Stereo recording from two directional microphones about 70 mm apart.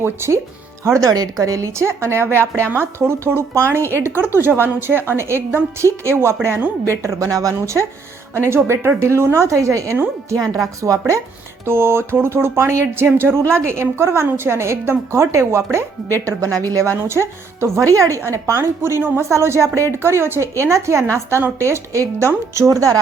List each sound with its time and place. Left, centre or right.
0.0 s speech: right
1.1 s a woman's voice: right
11.6 s speech: right
16.2 s a woman's voice: right
17.0 s a woman's voice: right